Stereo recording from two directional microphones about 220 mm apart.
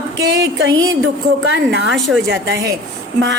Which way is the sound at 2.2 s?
55° right (ahead or behind).